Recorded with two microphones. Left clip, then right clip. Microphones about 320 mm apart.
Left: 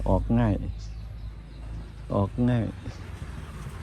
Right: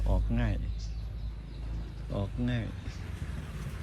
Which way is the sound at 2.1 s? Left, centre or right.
Left.